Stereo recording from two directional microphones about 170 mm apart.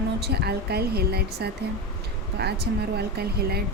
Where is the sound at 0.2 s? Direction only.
70° right (ahead or behind).